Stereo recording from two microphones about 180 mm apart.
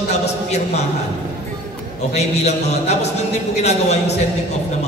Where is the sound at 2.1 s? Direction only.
40° left (ahead or behind).